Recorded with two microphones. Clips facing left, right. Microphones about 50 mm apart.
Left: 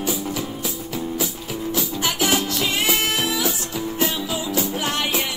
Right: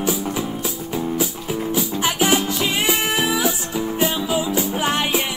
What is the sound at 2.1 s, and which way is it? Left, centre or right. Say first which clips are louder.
Music: right 3 dB; centre.